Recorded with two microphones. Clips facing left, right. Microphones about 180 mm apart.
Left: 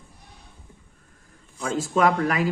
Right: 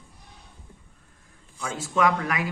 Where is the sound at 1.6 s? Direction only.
35° left (ahead or behind).